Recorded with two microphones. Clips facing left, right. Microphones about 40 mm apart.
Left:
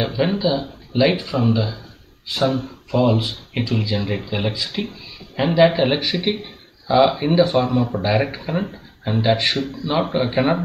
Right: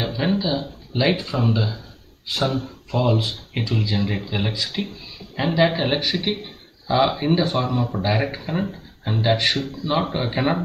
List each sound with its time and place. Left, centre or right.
0.0 s a man's voice: centre
2.4 s speech: left
2.9 s a man's voice: centre